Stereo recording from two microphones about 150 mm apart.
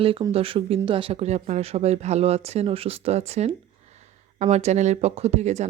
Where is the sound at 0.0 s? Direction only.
40° right (ahead or behind).